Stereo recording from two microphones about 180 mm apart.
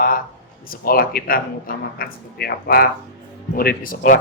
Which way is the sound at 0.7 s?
55° left (ahead or behind).